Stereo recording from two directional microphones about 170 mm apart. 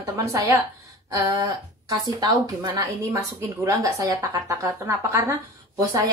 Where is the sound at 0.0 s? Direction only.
20° right (ahead or behind).